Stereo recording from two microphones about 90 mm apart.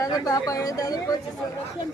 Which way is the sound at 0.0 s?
40° left (ahead or behind).